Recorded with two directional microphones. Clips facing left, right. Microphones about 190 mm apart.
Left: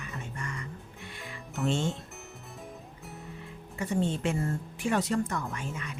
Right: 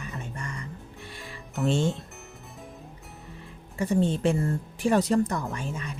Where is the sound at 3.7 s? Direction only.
35° right (ahead or behind).